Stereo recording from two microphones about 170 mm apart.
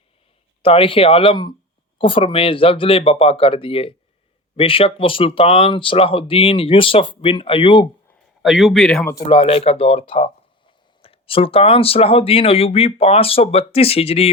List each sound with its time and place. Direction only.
0.6 s speech: 35° left (ahead or behind)
8.4 s a man's voice: centre (ahead or behind)
9.2 s speech: 35° left (ahead or behind)